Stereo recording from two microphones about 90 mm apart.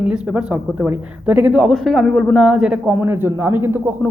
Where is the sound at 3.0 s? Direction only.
25° right (ahead or behind).